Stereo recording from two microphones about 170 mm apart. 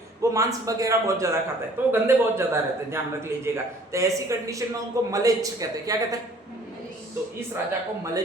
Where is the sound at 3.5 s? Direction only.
15° right (ahead or behind).